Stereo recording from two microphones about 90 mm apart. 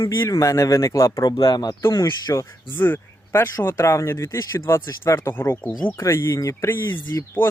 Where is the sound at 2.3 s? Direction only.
25° left (ahead or behind).